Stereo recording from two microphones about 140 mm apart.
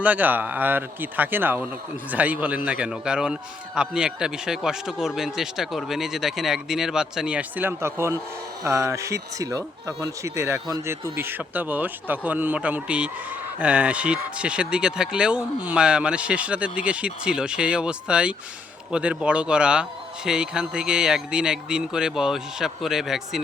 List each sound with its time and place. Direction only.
0.0 s a man's voice: 10° right (ahead or behind)